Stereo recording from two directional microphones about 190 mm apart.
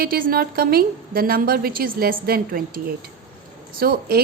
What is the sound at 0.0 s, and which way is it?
A woman's voice, 50° right (ahead or behind).